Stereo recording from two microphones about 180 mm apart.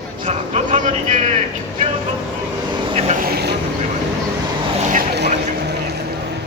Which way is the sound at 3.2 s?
60° right (ahead or behind).